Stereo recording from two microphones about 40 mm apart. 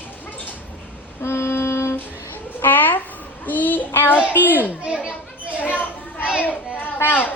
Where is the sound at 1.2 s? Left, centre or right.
Left.